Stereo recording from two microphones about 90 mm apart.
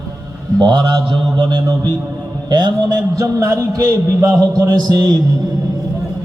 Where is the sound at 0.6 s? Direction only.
55° right (ahead or behind).